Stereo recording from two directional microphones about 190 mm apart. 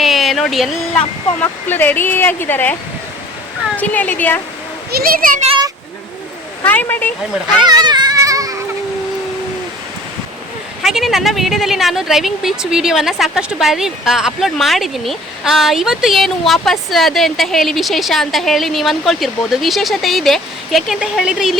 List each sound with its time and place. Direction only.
0.0 s a sound: centre (ahead or behind)
1.4 s speech: 10° left (ahead or behind)
3.8 s speech: 10° left (ahead or behind)
4.9 s a child's voice: 50° right (ahead or behind)
6.7 s speech: 10° left (ahead or behind)
7.7 s baby cry: 20° right (ahead or behind)
10.8 s speech: centre (ahead or behind)